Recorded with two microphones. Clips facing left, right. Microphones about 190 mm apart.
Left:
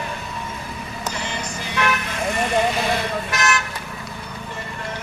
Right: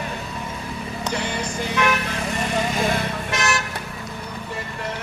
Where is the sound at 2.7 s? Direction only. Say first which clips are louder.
Even; 45° right (ahead or behind).